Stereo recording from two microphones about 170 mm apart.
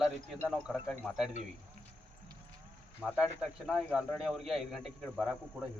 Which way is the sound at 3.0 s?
5° right (ahead or behind).